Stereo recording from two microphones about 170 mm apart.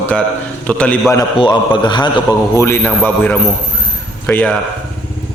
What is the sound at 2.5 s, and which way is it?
Speech, 15° left (ahead or behind).